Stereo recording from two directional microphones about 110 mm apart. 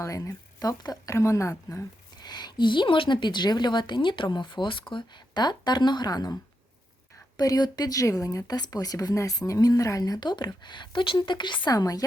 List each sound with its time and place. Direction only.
0.0 s speech: 30° left (ahead or behind)
2.2 s a woman's voice: 40° left (ahead or behind)
7.3 s speech: 35° left (ahead or behind)